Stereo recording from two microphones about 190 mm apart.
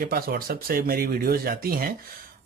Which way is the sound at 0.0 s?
50° right (ahead or behind).